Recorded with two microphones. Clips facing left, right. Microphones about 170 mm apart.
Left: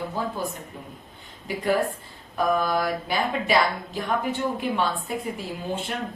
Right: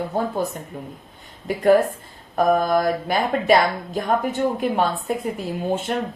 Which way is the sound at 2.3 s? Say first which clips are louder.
Right 5 dB; 50° right (ahead or behind).